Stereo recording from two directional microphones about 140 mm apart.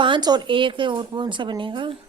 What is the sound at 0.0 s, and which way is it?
Speech, 30° right (ahead or behind).